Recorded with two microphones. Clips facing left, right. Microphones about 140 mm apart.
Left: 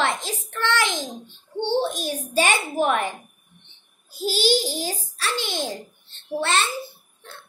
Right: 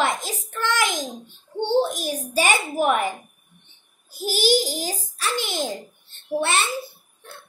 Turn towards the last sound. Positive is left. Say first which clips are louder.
# right 1 dB
turn(degrees=-15)  # may be behind; listen again after turning